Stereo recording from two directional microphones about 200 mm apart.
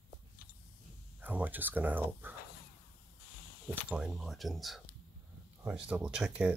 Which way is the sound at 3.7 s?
5° right (ahead or behind).